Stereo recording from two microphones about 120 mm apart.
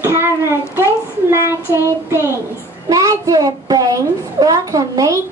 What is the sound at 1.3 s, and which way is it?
Speech, 20° right (ahead or behind).